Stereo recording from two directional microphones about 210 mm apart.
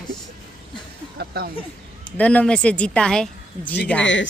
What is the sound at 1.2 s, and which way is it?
Speech, 45° right (ahead or behind).